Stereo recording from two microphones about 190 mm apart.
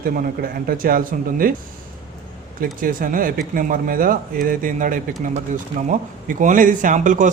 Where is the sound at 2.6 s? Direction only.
45° right (ahead or behind).